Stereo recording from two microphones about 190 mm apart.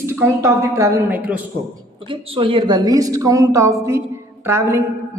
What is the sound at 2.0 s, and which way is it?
A woman's voice, 30° right (ahead or behind).